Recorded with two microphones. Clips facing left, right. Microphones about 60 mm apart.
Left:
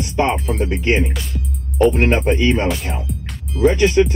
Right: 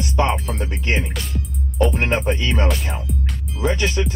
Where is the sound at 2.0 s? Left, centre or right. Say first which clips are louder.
Left 4 dB; left.